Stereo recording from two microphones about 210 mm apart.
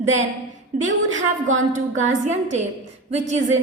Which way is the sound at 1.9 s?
35° right (ahead or behind).